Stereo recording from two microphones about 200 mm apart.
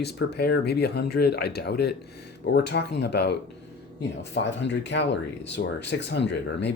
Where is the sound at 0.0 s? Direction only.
55° left (ahead or behind).